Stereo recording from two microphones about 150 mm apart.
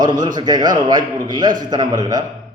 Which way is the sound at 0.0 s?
30° right (ahead or behind).